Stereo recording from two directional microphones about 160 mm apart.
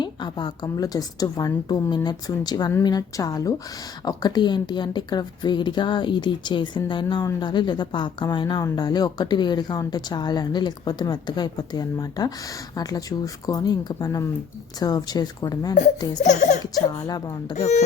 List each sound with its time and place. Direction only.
0.0 s a woman's voice: 30° left (ahead or behind)
16.2 s speech: 50° left (ahead or behind)
16.9 s a woman's voice: 25° left (ahead or behind)